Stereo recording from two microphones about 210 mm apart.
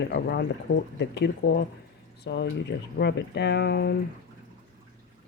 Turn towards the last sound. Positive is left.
turn(degrees=50)  # may be behind; listen again after turning